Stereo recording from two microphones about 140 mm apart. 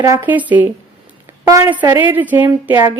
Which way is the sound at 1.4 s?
25° right (ahead or behind).